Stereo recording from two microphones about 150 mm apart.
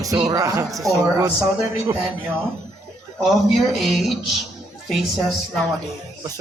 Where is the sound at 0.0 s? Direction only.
25° right (ahead or behind).